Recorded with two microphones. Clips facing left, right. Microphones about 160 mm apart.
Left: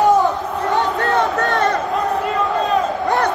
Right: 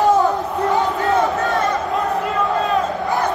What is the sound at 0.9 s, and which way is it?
Crowd, 70° left (ahead or behind).